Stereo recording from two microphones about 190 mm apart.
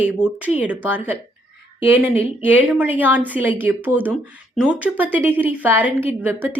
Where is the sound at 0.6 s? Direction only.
10° right (ahead or behind).